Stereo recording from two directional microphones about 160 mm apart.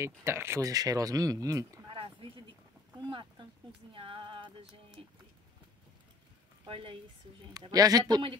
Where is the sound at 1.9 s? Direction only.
35° right (ahead or behind).